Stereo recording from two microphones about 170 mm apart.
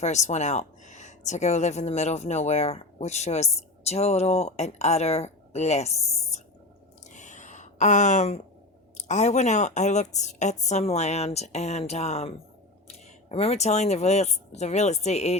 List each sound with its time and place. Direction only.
0.0 s speech: 40° left (ahead or behind)
7.1 s a sound: 45° left (ahead or behind)
9.0 s speech: 45° left (ahead or behind)